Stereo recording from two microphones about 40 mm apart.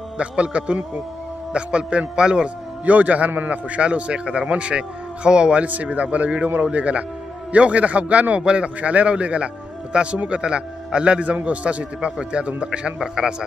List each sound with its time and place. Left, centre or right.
0.2 s speech: right
2.8 s a man's voice: right
5.7 s a man's voice: right
8.4 s speech: right
8.6 s a man's voice: right